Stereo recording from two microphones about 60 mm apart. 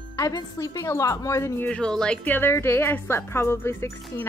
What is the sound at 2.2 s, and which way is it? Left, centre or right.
Speech, left.